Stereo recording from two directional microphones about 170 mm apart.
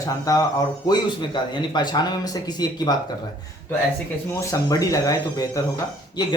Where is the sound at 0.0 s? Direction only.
20° left (ahead or behind).